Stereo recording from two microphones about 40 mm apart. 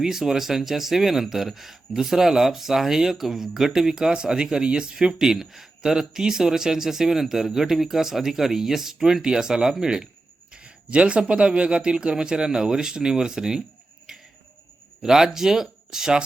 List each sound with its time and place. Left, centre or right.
0.0 s speech: centre
10.5 s speech: right
14.1 s a sound: centre
15.0 s speech: centre